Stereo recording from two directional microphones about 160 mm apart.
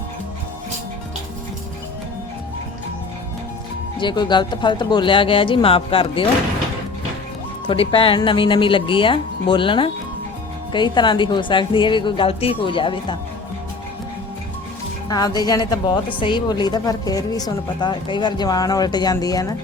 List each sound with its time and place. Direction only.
3.9 s a woman's voice: 30° left (ahead or behind)
7.7 s a woman's voice: 35° left (ahead or behind)
15.1 s a woman's voice: 25° left (ahead or behind)